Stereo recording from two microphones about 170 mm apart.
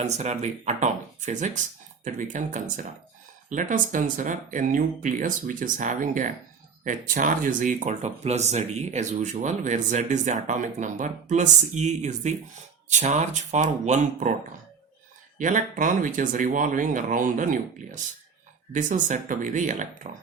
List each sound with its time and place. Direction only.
0.0 s speech: 40° right (ahead or behind)
15.4 s speech: 50° right (ahead or behind)